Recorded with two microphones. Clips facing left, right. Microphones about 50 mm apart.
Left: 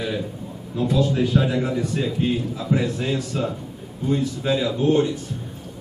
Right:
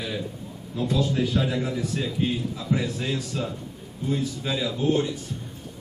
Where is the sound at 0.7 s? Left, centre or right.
Centre.